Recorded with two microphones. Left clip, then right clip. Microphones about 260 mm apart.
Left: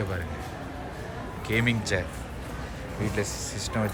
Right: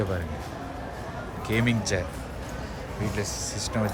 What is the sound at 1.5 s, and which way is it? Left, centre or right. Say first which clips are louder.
Speech: even; centre.